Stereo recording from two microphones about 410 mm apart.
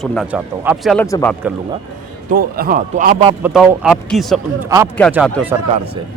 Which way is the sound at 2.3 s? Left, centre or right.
Right.